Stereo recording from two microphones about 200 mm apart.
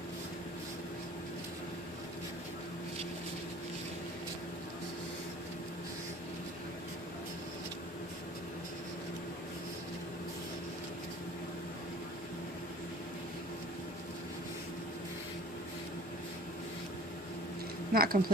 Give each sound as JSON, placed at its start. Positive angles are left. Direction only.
{"t": 17.9, "sound": "a woman's voice", "side_deg": -50}